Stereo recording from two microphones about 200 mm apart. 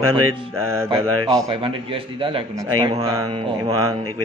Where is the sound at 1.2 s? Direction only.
15° right (ahead or behind).